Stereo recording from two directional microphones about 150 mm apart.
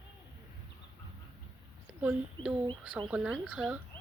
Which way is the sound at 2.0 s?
10° right (ahead or behind).